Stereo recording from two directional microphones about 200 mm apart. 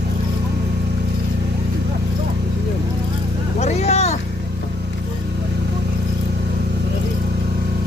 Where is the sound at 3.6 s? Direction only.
35° left (ahead or behind).